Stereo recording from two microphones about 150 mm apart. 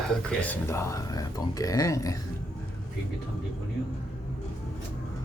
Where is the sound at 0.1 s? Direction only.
10° left (ahead or behind).